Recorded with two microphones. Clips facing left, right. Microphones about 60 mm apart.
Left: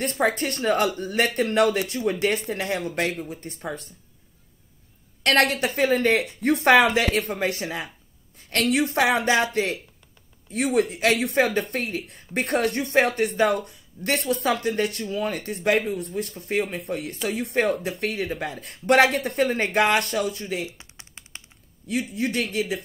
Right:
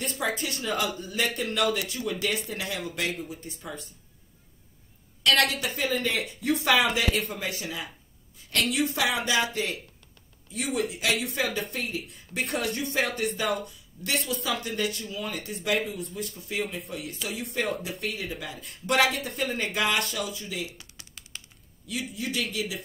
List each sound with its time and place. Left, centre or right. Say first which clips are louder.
0.0 s speech: left 6 dB; left
2.1 s speech: left 6 dB; left
5.2 s speech: left 4 dB; left
8.4 s a sound: left 2 dB; left
8.7 s speech: left 7 dB; left
20.6 s typing: left 3 dB; left
22.1 s speech: left 4 dB; left